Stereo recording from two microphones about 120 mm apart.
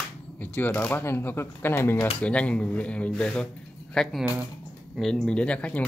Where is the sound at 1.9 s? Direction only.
45° left (ahead or behind).